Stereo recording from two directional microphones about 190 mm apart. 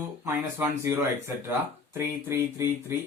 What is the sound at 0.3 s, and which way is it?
Speech, 15° right (ahead or behind).